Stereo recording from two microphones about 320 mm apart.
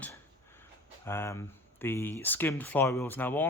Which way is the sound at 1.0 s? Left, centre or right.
Centre.